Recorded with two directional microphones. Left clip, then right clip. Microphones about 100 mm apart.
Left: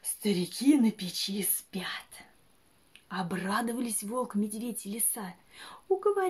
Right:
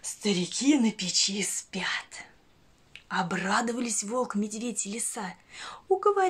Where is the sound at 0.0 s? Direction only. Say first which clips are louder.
Right 2 dB; 25° left (ahead or behind).